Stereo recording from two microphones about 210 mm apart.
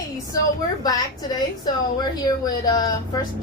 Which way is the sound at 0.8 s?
20° left (ahead or behind).